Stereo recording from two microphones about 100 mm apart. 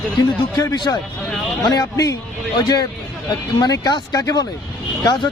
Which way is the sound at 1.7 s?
35° left (ahead or behind).